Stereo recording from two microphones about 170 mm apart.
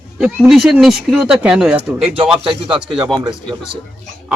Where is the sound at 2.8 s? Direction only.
5° right (ahead or behind).